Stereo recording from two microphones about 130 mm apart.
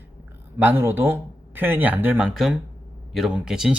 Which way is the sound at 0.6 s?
15° right (ahead or behind).